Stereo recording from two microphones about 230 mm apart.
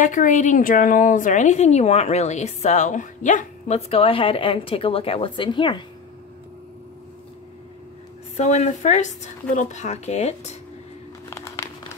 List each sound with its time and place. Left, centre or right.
0.0 s speech: left
8.4 s speech: left
11.2 s a sound: centre